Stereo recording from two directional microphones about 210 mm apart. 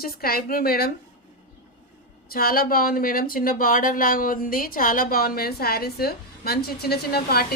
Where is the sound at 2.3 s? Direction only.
45° left (ahead or behind).